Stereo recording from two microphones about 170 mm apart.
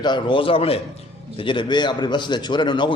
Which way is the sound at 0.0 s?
30° left (ahead or behind).